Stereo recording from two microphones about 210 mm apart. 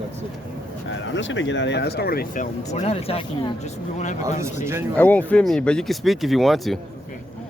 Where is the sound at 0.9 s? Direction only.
65° left (ahead or behind); by 4.2 s 35° left (ahead or behind).